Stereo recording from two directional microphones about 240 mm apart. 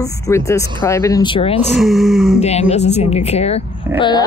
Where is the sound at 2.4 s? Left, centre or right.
Left.